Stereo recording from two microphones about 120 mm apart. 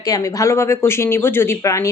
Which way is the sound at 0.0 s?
30° left (ahead or behind).